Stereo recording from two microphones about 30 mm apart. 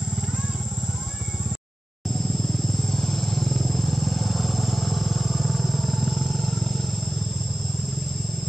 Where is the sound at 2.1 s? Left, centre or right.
Centre.